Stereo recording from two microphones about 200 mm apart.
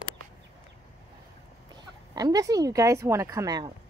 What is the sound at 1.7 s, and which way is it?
Speech, 20° right (ahead or behind).